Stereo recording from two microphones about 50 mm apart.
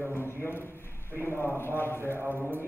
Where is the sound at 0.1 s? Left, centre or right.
Left.